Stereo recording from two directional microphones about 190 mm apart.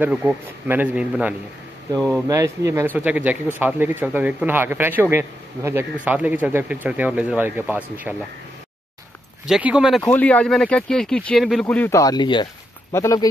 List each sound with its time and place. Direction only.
0.0 s a man's voice: 5° right (ahead or behind)
2.0 s speech: 5° left (ahead or behind)
2.2 s a man's voice: 15° right (ahead or behind)
9.5 s speech: 5° right (ahead or behind); by 13.3 s 15° left (ahead or behind)